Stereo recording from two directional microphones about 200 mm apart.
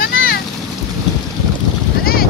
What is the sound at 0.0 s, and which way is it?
Boat, 45° left (ahead or behind).